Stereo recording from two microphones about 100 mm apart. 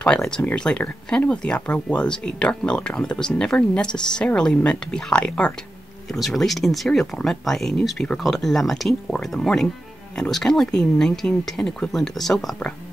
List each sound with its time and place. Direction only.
0.6 s speech: 10° left (ahead or behind)